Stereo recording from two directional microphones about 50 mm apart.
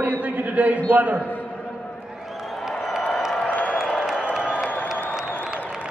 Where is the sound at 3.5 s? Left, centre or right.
Left.